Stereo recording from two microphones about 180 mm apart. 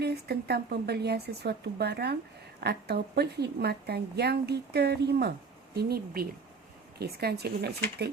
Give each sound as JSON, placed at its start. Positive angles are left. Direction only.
{"t": 0.0, "sound": "a woman's voice", "side_deg": -65}